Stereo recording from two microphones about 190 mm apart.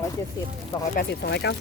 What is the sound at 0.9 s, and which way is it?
Speech, 60° left (ahead or behind).